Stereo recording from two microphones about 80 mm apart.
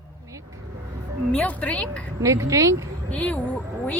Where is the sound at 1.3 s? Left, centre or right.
Centre.